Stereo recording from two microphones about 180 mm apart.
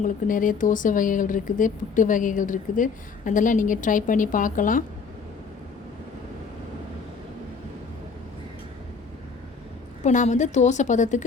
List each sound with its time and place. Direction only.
0.0 s speech: 50° left (ahead or behind)
10.0 s a woman's voice: 40° left (ahead or behind)